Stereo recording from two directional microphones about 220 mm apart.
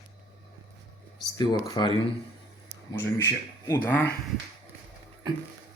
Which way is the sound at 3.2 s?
15° left (ahead or behind).